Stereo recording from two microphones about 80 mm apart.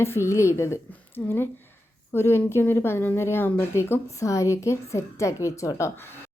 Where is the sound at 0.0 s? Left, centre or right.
Left.